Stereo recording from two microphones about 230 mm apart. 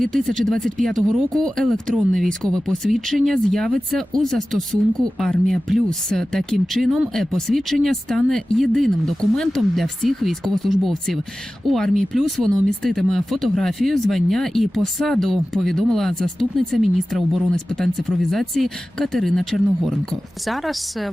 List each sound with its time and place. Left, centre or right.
0.0 s speech: centre